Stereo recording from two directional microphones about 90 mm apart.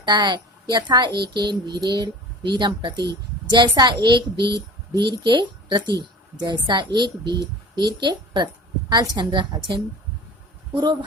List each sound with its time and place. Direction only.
0.0 s a child's voice: 55° right (ahead or behind)